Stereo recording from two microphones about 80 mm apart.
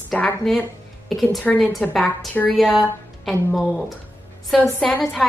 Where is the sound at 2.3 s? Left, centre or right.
Left.